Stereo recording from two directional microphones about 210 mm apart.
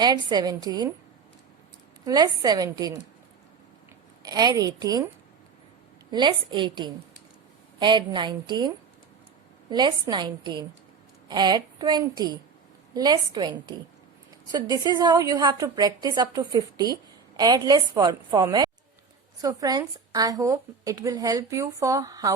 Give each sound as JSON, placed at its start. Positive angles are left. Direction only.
{"t": 0.0, "sound": "a woman's voice", "side_deg": -20}
{"t": 2.0, "sound": "a woman's voice", "side_deg": -20}
{"t": 4.2, "sound": "a woman's voice", "side_deg": -20}
{"t": 6.1, "sound": "a woman's voice", "side_deg": -20}